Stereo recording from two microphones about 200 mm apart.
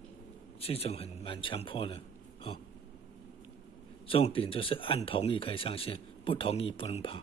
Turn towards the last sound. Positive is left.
turn(degrees=25)  # may be behind; listen again after turning